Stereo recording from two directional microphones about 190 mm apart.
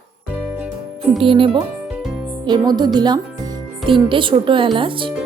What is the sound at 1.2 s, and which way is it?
A woman's voice, 25° right (ahead or behind).